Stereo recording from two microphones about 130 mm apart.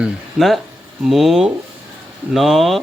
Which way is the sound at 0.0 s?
Centre (ahead or behind).